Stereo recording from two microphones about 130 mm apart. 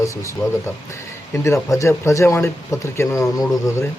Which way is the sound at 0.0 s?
25° left (ahead or behind).